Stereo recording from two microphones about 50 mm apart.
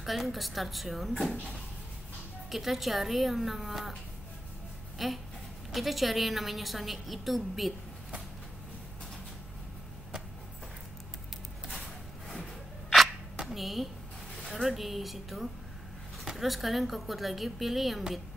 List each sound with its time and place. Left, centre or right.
0.0 s a woman's voice: centre
2.5 s a woman's voice: centre
4.9 s a woman's voice: centre
13.4 s a sound: centre
14.4 s a woman's voice: centre